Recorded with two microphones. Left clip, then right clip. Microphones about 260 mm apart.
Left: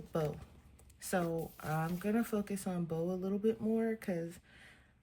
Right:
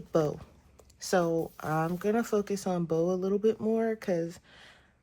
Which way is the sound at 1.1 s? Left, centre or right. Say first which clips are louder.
Right 9 dB; centre.